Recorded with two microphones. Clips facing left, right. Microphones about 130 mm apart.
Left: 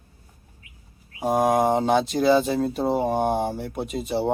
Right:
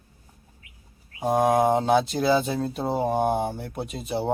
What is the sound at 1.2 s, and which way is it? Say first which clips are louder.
Speech: even; centre (ahead or behind).